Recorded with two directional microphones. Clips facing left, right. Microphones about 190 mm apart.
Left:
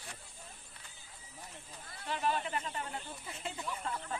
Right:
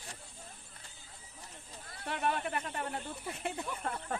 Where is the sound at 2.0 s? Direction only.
60° right (ahead or behind).